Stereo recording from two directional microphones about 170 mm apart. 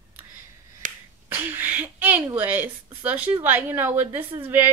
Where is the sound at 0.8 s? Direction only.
50° right (ahead or behind).